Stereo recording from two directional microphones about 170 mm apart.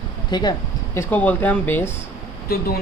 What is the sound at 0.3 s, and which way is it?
Speech, 25° left (ahead or behind).